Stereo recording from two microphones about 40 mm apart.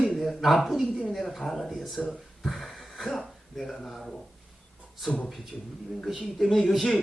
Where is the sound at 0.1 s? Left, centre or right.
Centre.